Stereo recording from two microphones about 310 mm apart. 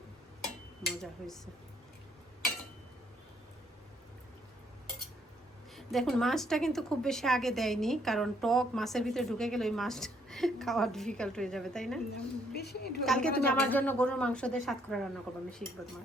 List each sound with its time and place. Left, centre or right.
0.9 s speech: centre
5.7 s a woman's voice: centre
12.5 s a woman's voice: left
13.1 s a woman's voice: centre